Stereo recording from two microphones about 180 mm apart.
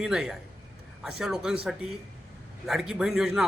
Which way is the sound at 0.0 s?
5° right (ahead or behind).